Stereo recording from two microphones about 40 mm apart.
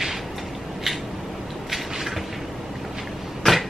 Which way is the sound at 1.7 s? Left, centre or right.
Centre.